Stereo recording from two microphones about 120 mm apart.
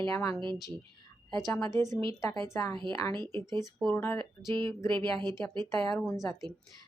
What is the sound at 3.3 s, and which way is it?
Speech, 35° right (ahead or behind).